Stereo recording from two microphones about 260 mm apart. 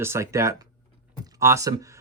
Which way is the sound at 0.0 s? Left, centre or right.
Centre.